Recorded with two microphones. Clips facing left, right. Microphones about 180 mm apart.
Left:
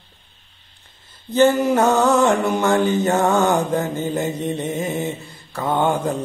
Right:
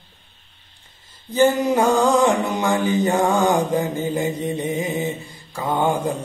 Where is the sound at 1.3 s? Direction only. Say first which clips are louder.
Left 2 dB; 10° right (ahead or behind).